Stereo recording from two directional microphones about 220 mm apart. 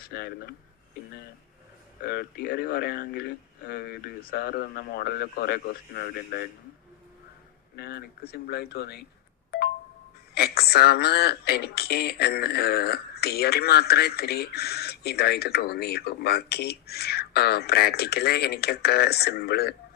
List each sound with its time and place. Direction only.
0.1 s speech: 45° left (ahead or behind)
2.0 s speech: 45° left (ahead or behind)
7.7 s speech: 45° left (ahead or behind)
10.3 s speech: 45° left (ahead or behind)